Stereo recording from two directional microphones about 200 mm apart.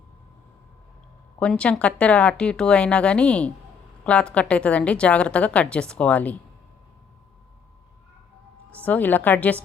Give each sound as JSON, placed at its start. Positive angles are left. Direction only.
{"t": 1.4, "sound": "a woman's voice", "side_deg": 5}
{"t": 8.7, "sound": "a woman's voice", "side_deg": 10}